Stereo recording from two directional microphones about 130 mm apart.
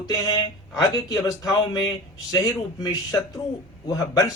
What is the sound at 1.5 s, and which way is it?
A man's voice, 30° left (ahead or behind).